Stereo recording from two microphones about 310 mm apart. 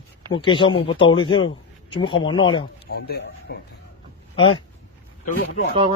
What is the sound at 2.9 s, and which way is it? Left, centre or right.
Speech, left.